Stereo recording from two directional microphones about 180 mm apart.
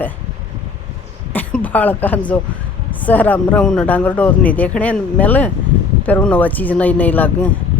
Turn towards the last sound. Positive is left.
turn(degrees=10)  # may be behind; listen again after turning